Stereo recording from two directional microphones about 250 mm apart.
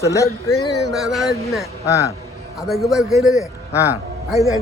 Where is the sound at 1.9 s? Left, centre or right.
Centre.